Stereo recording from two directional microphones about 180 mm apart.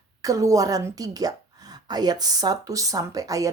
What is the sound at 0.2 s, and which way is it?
A woman's voice, 20° right (ahead or behind).